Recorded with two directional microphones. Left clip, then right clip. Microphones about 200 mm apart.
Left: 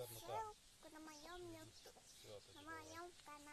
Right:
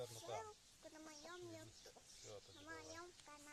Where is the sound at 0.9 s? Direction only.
Centre (ahead or behind).